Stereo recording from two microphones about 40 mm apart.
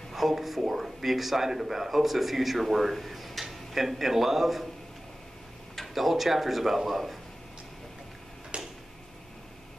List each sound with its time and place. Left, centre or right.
0.1 s a man's voice: centre
5.8 s a man's voice: centre
8.5 s tick-tock: right